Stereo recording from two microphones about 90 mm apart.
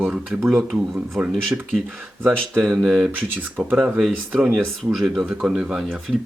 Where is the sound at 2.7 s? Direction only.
10° right (ahead or behind).